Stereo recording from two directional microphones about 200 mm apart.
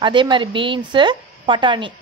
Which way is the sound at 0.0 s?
25° right (ahead or behind).